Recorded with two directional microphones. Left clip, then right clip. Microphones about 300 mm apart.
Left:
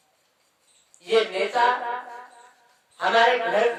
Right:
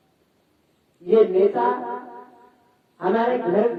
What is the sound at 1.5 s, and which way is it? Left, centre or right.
Speech, left.